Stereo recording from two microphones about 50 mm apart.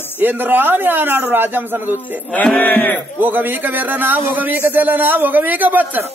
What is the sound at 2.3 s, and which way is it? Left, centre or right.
Speech, left.